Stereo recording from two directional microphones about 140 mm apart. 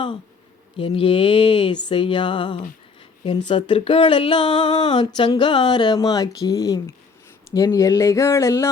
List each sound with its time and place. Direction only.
0.8 s speech: 40° left (ahead or behind); by 8.7 s 20° left (ahead or behind)